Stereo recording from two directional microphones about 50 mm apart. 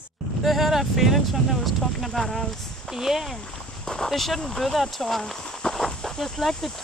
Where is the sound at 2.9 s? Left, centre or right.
Centre.